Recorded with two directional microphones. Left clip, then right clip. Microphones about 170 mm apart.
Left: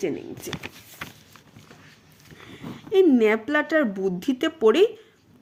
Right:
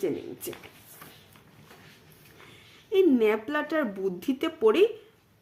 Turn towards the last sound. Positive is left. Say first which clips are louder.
# left 4 dB
turn(degrees=35)  # may be behind; listen again after turning